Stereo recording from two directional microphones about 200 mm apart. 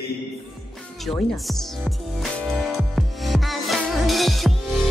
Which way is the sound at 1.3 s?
Centre (ahead or behind).